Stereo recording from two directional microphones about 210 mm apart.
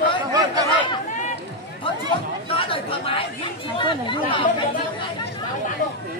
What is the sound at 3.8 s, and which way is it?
Speech, 25° left (ahead or behind).